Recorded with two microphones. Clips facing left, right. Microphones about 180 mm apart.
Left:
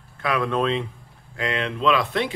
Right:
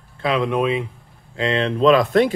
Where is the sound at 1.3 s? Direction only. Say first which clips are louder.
Right 6 dB; 30° right (ahead or behind); by 2.3 s 45° right (ahead or behind).